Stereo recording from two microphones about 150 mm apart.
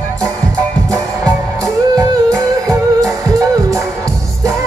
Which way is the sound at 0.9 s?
20° right (ahead or behind).